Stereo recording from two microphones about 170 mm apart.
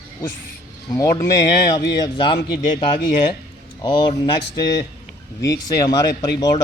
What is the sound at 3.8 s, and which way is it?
Speech, 25° left (ahead or behind).